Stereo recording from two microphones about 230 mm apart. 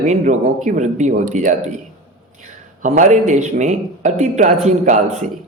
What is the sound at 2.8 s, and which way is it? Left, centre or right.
Speech, right.